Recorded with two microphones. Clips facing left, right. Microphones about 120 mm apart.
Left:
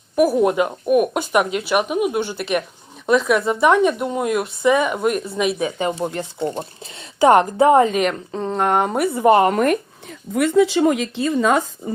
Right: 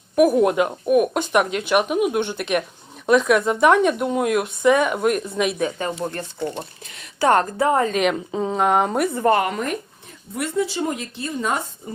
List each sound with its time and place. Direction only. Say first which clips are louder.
0.2 s speech: even; centre (ahead or behind)
6.1 s a woman's voice: left 3 dB; 15° left (ahead or behind)
7.9 s speech: even; 5° right (ahead or behind)
9.5 s speech: left 8 dB; 65° left (ahead or behind); by 11.6 s 90° left